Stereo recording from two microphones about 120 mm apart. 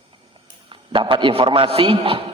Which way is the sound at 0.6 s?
45° right (ahead or behind).